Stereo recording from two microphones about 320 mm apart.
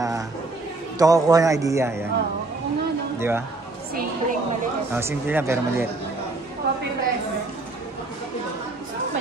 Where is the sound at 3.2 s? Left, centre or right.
Centre.